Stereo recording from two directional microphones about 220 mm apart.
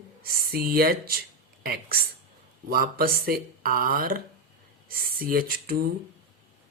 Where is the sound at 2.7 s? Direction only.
40° right (ahead or behind).